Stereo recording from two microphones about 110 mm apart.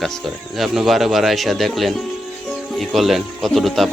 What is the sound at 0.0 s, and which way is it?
Speech, centre (ahead or behind).